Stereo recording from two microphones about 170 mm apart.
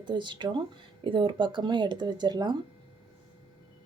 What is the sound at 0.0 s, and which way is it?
Speech, 25° right (ahead or behind).